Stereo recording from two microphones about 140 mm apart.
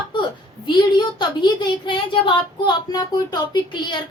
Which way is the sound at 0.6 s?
35° left (ahead or behind).